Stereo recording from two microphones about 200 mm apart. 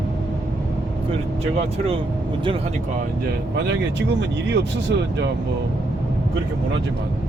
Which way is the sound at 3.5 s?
60° right (ahead or behind).